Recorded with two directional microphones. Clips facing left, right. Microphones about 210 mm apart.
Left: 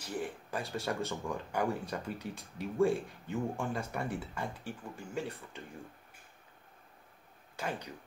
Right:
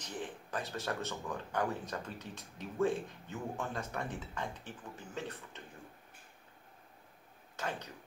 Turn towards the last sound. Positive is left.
turn(degrees=10)  # may be behind; listen again after turning